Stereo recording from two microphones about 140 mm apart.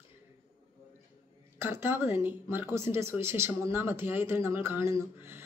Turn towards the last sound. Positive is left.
turn(degrees=-15)  # may be behind; listen again after turning